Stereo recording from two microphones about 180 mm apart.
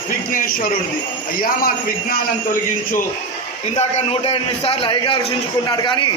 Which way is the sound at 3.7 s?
35° left (ahead or behind).